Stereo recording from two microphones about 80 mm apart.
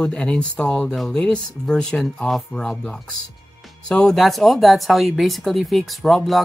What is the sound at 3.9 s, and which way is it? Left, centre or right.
Speech, centre.